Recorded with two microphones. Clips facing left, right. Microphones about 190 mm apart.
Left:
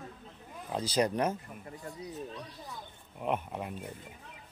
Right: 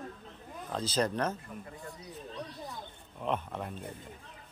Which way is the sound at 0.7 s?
10° left (ahead or behind).